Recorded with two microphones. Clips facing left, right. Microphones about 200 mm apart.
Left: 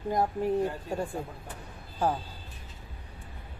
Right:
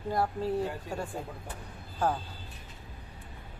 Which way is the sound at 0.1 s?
15° left (ahead or behind).